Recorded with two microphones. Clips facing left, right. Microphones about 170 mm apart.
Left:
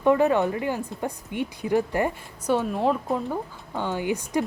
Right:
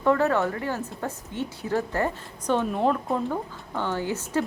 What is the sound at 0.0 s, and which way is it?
A woman's voice, 15° left (ahead or behind).